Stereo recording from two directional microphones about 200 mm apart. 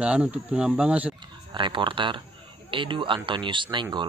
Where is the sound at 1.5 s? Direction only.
25° right (ahead or behind).